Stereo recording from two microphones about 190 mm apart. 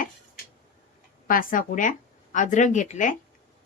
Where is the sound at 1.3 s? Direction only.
45° left (ahead or behind).